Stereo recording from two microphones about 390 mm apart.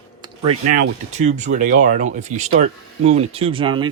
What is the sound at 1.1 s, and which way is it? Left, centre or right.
Speech, centre.